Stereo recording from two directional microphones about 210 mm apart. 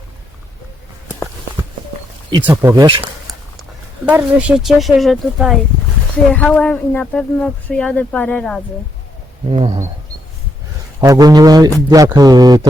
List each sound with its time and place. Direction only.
2.4 s speech: 10° right (ahead or behind)
3.0 s speech: 5° right (ahead or behind)
9.5 s speech: 25° right (ahead or behind)
11.0 s speech: 20° right (ahead or behind)